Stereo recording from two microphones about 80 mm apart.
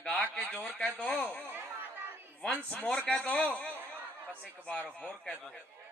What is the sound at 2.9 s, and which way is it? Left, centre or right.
Speech, centre.